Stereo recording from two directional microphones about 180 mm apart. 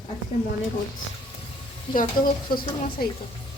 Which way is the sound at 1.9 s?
30° left (ahead or behind).